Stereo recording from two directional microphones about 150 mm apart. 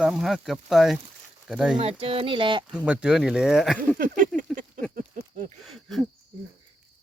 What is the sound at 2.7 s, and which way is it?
Speech, 5° right (ahead or behind).